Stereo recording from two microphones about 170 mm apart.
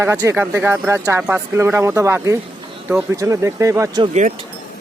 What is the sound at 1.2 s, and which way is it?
Speech, 5° right (ahead or behind).